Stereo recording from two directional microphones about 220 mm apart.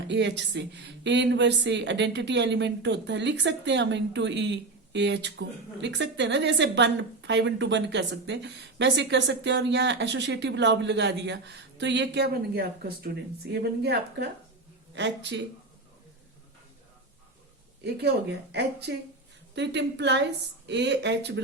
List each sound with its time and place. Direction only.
0.1 s a woman's voice: 55° right (ahead or behind)
17.8 s a woman's voice: 50° right (ahead or behind)